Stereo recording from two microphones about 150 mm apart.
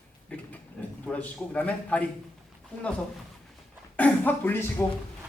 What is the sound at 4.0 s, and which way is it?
Speech, 15° left (ahead or behind).